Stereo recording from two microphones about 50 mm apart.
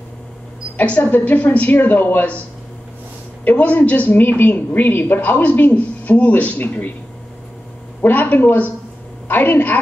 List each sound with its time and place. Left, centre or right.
0.8 s a woman's voice: left
3.4 s a woman's voice: left
4.2 s a woman's voice: left
8.0 s a woman's voice: left